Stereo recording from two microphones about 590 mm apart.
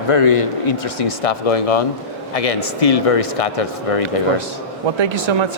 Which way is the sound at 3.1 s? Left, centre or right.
Left.